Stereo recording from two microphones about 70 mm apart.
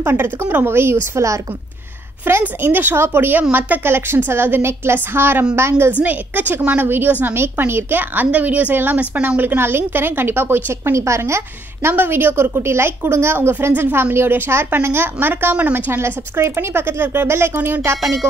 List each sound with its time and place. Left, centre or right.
0.0 s a woman's voice: right
1.1 s a woman's voice: right
2.3 s a woman's voice: right
5.9 s a woman's voice: right
11.9 s a woman's voice: right